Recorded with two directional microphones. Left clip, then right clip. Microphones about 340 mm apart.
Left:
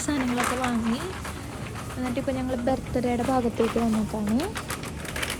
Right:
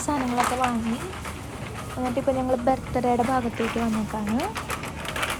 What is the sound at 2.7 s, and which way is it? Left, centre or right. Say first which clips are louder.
Speech: right 1 dB; centre.